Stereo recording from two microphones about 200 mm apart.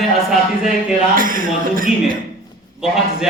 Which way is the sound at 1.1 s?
45° right (ahead or behind).